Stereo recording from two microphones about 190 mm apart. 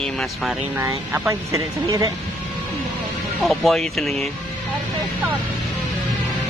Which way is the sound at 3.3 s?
Centre (ahead or behind).